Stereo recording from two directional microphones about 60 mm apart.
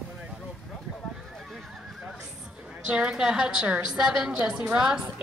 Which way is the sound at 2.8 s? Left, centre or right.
Centre.